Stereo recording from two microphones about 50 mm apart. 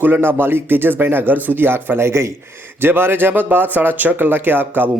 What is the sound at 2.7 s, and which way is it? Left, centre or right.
Speech, right.